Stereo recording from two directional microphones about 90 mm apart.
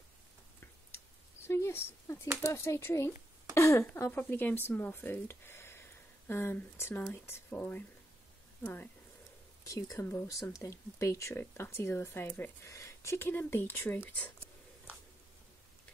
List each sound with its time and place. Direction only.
1.5 s a sound: 30° left (ahead or behind)
2.4 s speech: 30° left (ahead or behind)
9.7 s speech: 40° left (ahead or behind)
9.9 s speech: 25° left (ahead or behind)
10.3 s speech: 40° left (ahead or behind); by 14.3 s 20° left (ahead or behind)